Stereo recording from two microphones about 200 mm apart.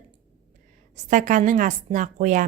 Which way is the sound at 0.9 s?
40° right (ahead or behind).